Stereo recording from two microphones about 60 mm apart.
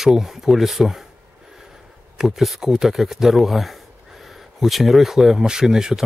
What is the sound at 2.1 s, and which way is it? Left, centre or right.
Speech, centre.